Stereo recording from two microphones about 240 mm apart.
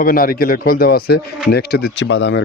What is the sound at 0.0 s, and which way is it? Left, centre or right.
A man's voice, left.